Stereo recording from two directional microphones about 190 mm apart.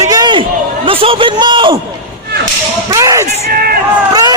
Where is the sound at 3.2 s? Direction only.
55° right (ahead or behind).